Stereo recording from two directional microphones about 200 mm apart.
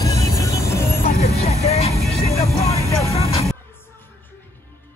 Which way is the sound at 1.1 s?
35° left (ahead or behind).